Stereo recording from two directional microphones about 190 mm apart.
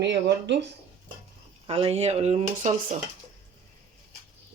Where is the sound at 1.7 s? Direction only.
30° right (ahead or behind).